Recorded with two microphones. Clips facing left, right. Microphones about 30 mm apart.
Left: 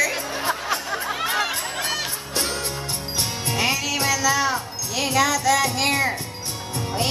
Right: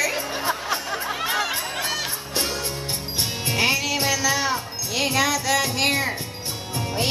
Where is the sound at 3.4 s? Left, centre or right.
Centre.